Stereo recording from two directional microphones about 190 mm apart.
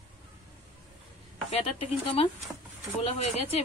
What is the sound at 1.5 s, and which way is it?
Speech, 30° left (ahead or behind).